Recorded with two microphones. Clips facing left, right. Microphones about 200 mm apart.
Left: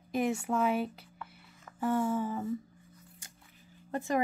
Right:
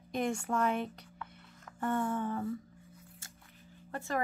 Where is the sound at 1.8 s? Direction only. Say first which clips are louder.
Left 3 dB; 5° left (ahead or behind).